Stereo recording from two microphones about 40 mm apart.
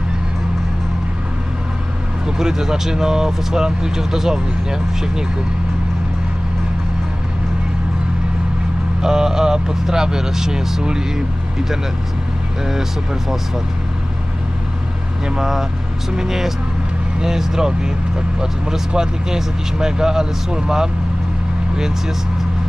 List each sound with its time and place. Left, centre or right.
2.2 s speech: centre
9.0 s speech: centre
15.4 s speech: centre